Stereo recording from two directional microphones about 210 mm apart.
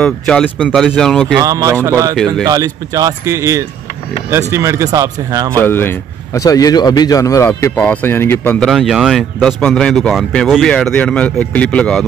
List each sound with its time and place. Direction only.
0.0 s a man's voice: 5° left (ahead or behind)
1.4 s speech: 15° right (ahead or behind)
5.6 s a man's voice: 10° left (ahead or behind)